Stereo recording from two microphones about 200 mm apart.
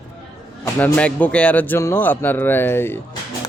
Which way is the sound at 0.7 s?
10° left (ahead or behind).